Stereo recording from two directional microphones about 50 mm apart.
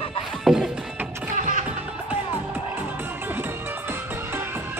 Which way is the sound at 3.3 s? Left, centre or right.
Right.